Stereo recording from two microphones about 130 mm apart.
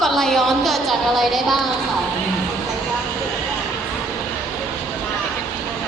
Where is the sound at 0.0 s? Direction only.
5° left (ahead or behind).